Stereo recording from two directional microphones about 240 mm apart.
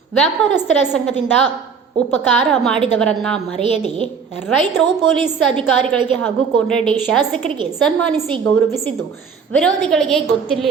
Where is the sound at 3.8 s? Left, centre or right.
Right.